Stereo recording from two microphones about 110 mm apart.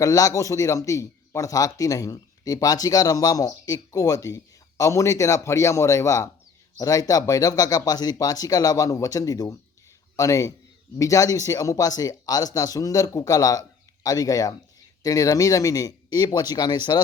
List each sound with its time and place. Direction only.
0.0 s speech: 30° left (ahead or behind)